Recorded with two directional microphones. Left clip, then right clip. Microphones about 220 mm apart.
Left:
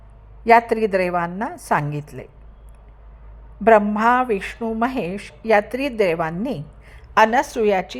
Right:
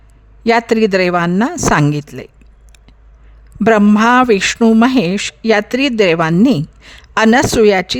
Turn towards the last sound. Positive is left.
turn(degrees=-35)  # may be behind; listen again after turning